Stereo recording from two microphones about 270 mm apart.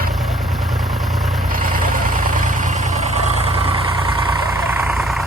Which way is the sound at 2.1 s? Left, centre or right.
Right.